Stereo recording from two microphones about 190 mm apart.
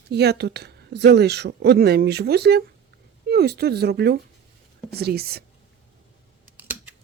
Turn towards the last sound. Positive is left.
turn(degrees=-10)  # may be behind; listen again after turning